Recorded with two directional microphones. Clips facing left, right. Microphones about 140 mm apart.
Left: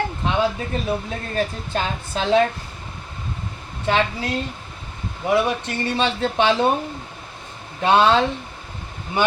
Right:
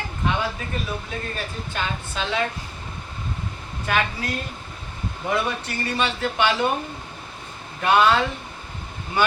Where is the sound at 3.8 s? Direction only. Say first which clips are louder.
Left 4 dB; 25° left (ahead or behind).